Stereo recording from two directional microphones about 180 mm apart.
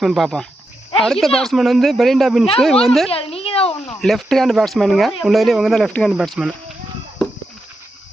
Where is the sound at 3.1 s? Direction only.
30° left (ahead or behind).